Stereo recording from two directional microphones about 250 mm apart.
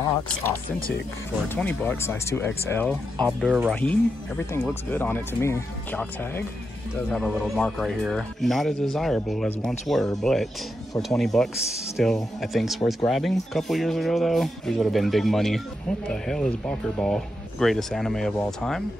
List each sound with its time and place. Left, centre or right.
0.7 s speech: left
1.5 s speech: centre
3.8 s speech: centre